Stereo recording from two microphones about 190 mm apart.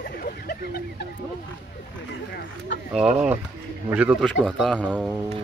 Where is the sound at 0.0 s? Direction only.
50° left (ahead or behind).